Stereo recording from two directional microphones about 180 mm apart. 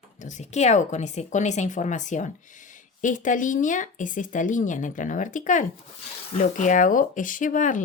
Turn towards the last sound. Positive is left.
turn(degrees=45)  # may be behind; listen again after turning